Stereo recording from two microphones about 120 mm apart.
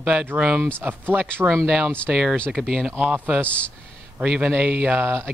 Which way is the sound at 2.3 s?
10° left (ahead or behind).